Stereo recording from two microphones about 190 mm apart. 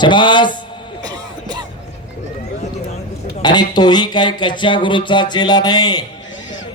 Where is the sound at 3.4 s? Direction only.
20° left (ahead or behind).